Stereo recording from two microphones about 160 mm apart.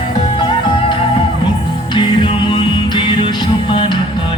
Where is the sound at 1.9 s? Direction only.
30° left (ahead or behind).